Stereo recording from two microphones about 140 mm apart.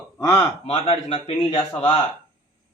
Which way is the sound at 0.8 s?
50° left (ahead or behind).